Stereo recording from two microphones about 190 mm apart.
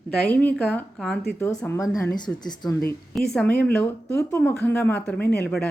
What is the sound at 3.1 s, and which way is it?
Speech, 5° left (ahead or behind).